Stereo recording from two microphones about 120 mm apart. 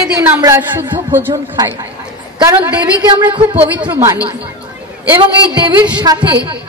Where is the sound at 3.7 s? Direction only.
15° right (ahead or behind).